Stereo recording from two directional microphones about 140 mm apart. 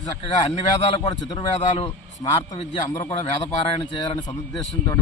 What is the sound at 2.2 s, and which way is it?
Speech, 25° left (ahead or behind).